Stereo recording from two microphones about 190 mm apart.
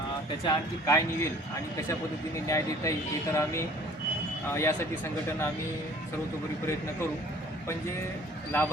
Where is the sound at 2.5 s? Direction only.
15° left (ahead or behind).